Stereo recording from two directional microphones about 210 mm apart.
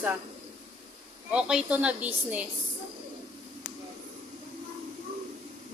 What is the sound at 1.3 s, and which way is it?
A woman's voice, 5° right (ahead or behind).